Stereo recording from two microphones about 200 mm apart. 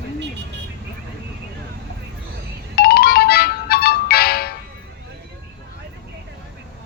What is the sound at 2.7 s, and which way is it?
Music, 50° left (ahead or behind).